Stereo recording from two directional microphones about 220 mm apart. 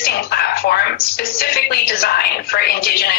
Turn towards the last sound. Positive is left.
turn(degrees=45)  # may be behind; listen again after turning